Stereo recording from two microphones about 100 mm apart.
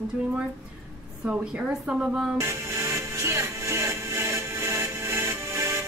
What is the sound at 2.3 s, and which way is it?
Music, 30° right (ahead or behind).